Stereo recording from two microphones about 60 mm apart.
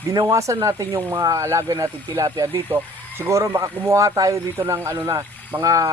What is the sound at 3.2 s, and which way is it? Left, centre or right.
Speech, right.